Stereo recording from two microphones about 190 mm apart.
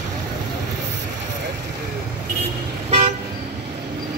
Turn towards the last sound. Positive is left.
turn(degrees=-35)  # may be behind; listen again after turning